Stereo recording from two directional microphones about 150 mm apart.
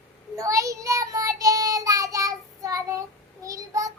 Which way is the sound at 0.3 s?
20° right (ahead or behind).